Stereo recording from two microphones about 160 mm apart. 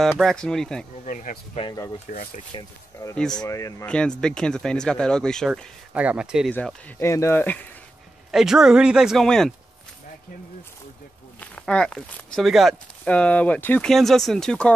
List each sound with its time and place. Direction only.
0.2 s speech: 5° left (ahead or behind)
1.0 s speech: 55° left (ahead or behind)
2.5 s speech: 20° left (ahead or behind)
3.2 s speech: 5° left (ahead or behind)
3.4 s speech: 20° left (ahead or behind)
3.8 s speech: 5° left (ahead or behind)
5.9 s speech: 5° right (ahead or behind)
6.5 s speech: 15° left (ahead or behind)
8.3 s speech: 5° right (ahead or behind)
11.5 s speech: 5° left (ahead or behind)